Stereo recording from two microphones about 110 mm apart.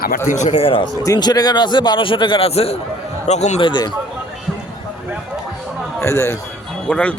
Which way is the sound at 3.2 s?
90° left.